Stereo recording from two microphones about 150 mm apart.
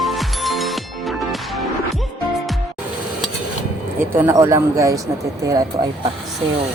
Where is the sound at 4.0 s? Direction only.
15° right (ahead or behind).